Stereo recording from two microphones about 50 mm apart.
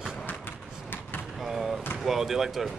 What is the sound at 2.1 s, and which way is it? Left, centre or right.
Speech, centre.